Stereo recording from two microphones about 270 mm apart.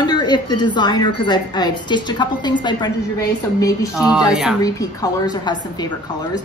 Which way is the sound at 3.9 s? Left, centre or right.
Centre.